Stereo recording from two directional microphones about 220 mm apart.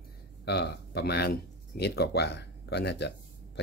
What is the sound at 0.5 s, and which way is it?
Speech, 50° left (ahead or behind).